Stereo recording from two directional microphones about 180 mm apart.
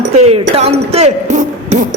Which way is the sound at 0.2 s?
35° right (ahead or behind).